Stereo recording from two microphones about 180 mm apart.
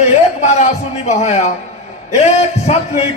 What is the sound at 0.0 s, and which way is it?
A man's voice, 40° left (ahead or behind).